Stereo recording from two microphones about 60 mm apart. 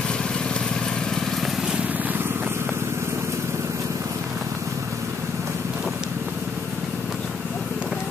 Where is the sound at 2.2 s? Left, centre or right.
Right.